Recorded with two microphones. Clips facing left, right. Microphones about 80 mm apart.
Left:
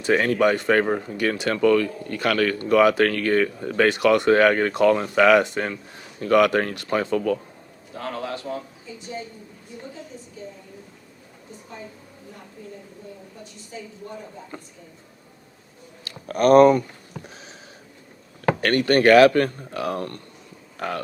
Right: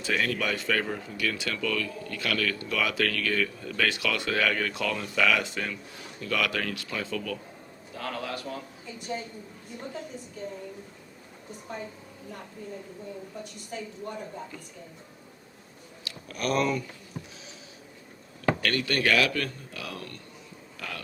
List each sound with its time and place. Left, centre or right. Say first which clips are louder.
0.0 s speech: left 10 dB; left
7.9 s a man's voice: left 4 dB; left
13.7 s a woman's voice: even; right
16.0 s speech: left 13 dB; left
18.4 s speech: left 7 dB; left